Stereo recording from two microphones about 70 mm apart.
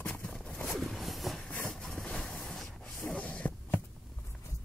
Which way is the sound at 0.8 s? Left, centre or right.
Centre.